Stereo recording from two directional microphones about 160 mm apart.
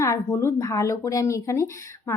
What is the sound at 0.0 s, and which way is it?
A woman's voice, 20° left (ahead or behind).